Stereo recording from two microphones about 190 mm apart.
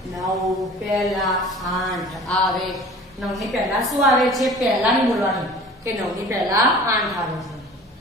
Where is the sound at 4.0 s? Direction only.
Centre (ahead or behind).